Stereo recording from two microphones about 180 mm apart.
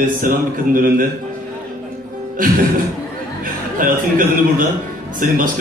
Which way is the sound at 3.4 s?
50° right (ahead or behind).